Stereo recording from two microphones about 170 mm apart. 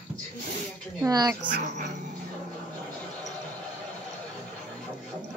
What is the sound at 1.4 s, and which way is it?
Speech, 50° right (ahead or behind).